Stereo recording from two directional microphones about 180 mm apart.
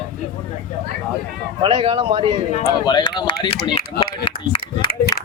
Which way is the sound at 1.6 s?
30° right (ahead or behind).